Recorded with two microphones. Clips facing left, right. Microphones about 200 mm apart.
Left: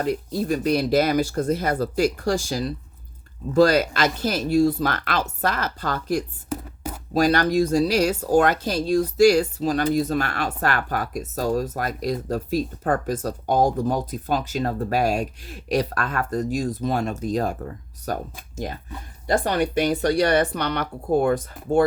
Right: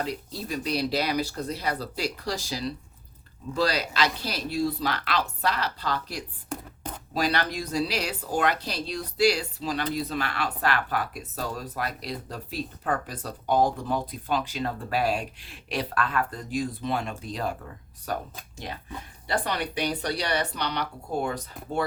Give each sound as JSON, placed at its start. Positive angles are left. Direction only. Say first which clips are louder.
{"t": 0.0, "sound": "speech", "louder": "left 8 dB", "side_deg": 50}
{"t": 6.5, "sound": "a sound", "louder": "left 5 dB", "side_deg": 5}
{"t": 7.1, "sound": "speech", "louder": "left 8 dB", "side_deg": 45}